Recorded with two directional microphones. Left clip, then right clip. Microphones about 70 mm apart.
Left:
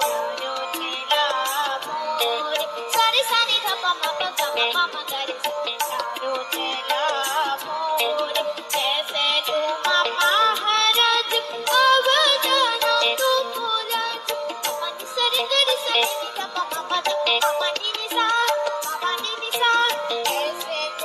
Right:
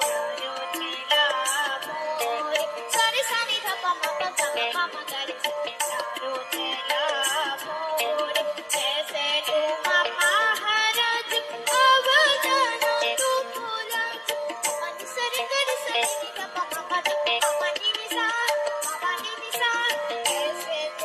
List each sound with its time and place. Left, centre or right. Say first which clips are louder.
0.0 s music: left 3 dB; centre
6.8 s music: left 2 dB; left